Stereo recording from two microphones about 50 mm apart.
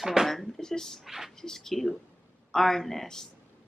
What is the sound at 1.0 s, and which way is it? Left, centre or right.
Speech, centre.